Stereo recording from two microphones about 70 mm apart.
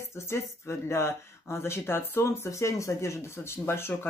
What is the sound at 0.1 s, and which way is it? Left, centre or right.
Speech, left.